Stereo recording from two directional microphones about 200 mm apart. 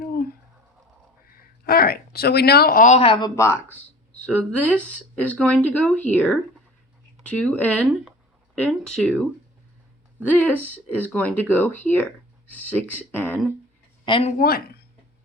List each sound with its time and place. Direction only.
0.0 s a sound: 45° left (ahead or behind)
1.4 s speech: 50° left (ahead or behind); by 9.2 s centre (ahead or behind)
10.2 s speech: 10° left (ahead or behind)
14.0 s speech: 25° left (ahead or behind)
14.3 s speech: 50° left (ahead or behind)